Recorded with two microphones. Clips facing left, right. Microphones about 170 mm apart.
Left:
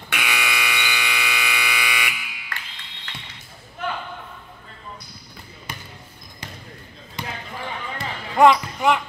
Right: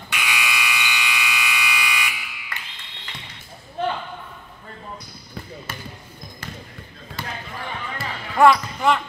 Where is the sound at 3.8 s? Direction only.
30° right (ahead or behind).